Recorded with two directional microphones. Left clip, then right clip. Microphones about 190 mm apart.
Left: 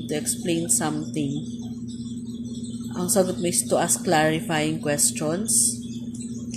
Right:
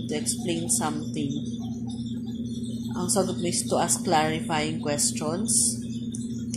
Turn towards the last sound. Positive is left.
turn(degrees=45)  # may be behind; listen again after turning